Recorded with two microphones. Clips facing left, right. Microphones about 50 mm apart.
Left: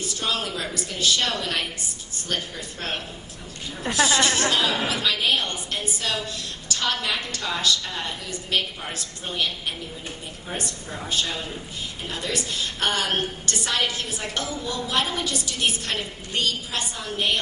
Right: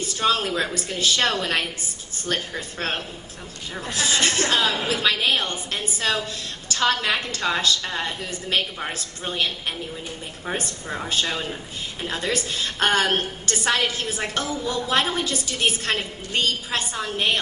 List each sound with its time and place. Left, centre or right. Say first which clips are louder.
0.2 s a woman's voice: right 6 dB; right
3.8 s a woman's voice: left 2 dB; left
5.0 s a woman's voice: right 3 dB; right
10.6 s a woman's voice: right 3 dB; right